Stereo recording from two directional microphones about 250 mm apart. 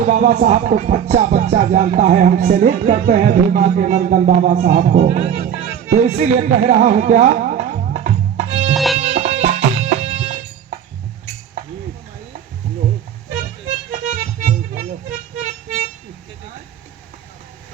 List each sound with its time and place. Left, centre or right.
0.1 s music: right
4.8 s speech: right
6.7 s music: right
8.7 s music: centre
9.0 s music: right
13.7 s music: right